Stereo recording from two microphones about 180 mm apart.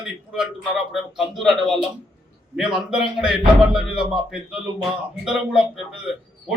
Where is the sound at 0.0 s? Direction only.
5° right (ahead or behind).